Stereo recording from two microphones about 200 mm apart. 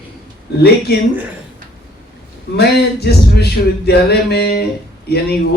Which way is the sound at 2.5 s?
55° left (ahead or behind).